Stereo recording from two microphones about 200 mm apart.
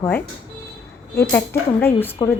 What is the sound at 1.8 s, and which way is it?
Speech, 10° left (ahead or behind).